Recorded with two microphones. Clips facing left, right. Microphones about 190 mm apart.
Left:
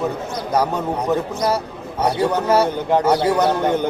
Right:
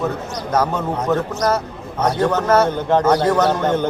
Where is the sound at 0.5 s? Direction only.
15° left (ahead or behind).